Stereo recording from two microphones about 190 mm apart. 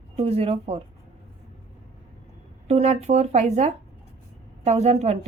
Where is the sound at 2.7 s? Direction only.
35° right (ahead or behind).